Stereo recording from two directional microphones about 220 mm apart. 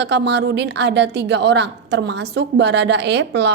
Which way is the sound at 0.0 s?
50° right (ahead or behind).